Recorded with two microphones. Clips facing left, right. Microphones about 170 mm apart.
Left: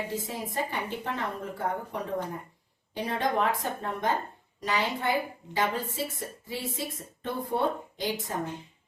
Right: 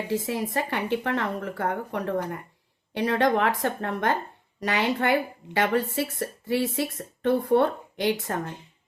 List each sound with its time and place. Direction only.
0.1 s speech: 75° right (ahead or behind)